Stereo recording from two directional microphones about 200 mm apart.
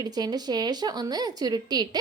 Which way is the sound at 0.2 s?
20° right (ahead or behind).